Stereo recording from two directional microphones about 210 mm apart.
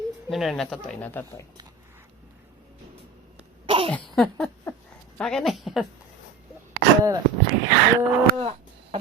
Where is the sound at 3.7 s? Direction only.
25° right (ahead or behind).